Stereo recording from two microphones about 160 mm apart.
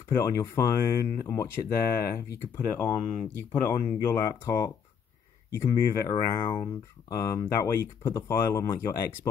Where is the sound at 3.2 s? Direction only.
10° left (ahead or behind).